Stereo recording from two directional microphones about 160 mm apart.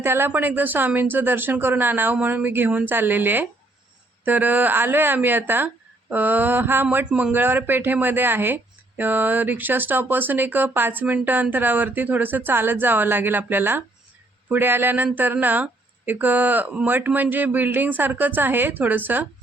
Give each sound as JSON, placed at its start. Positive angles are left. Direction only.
{"t": 0.0, "sound": "a woman's voice", "side_deg": -15}